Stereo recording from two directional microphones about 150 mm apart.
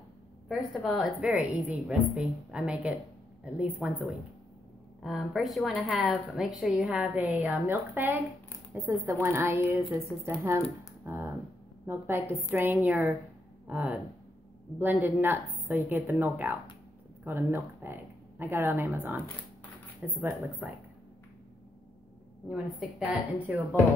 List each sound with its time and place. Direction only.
0.5 s a woman's voice: centre (ahead or behind); by 9.8 s 15° right (ahead or behind)
11.1 s a sound: 15° right (ahead or behind)
11.8 s a woman's voice: 15° right (ahead or behind)
22.5 s a woman's voice: 5° right (ahead or behind)